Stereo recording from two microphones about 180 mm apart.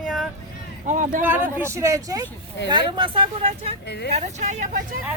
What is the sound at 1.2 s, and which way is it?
Speech, 10° right (ahead or behind).